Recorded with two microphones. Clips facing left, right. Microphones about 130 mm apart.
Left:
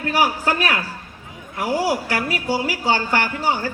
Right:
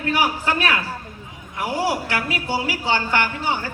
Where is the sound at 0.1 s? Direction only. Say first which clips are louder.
Left 2 dB; 40° left (ahead or behind).